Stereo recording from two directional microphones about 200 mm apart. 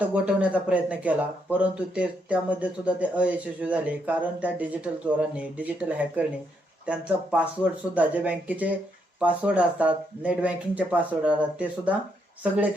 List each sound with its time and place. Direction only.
0.0 s speech: 5° right (ahead or behind)